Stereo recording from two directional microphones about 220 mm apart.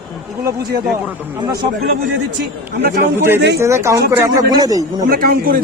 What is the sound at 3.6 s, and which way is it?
Speech, 15° right (ahead or behind).